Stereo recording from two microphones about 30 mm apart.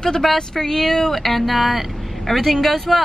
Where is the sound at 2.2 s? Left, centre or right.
Centre.